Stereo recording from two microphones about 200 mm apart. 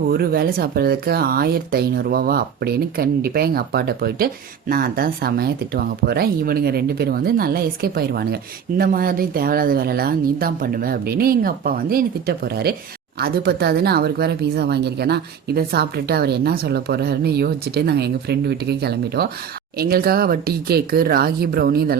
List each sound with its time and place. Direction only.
0.1 s speech: 50° right (ahead or behind)